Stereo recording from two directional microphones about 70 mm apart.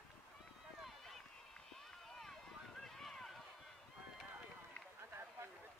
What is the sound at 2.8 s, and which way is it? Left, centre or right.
Run, centre.